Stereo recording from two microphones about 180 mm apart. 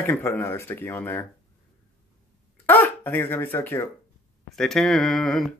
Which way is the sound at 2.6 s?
10° left (ahead or behind).